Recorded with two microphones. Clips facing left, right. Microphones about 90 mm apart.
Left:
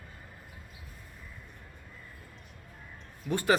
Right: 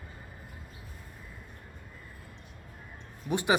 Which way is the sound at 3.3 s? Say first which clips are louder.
Left 1 dB; 15° right (ahead or behind).